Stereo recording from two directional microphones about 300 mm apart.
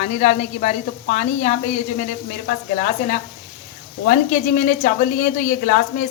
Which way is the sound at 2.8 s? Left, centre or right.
Left.